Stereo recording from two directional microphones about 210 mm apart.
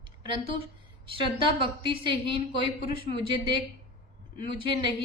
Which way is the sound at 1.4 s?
25° right (ahead or behind).